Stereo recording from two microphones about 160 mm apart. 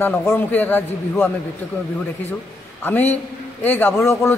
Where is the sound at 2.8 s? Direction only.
15° left (ahead or behind).